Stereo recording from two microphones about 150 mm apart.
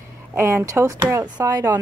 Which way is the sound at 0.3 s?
15° right (ahead or behind).